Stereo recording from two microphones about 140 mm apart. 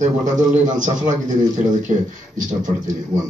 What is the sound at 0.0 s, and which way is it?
A man's voice, 60° right (ahead or behind).